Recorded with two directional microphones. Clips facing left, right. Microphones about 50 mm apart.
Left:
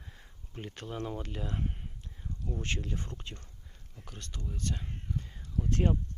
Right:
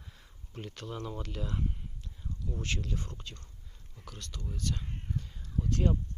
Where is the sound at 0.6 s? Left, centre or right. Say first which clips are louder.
Left 2 dB; centre.